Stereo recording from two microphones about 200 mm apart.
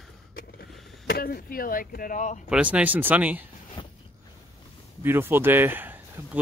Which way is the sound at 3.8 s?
25° left (ahead or behind).